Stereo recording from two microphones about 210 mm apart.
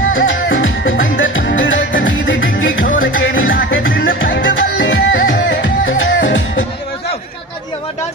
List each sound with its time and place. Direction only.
0.1 s music: 70° left (ahead or behind)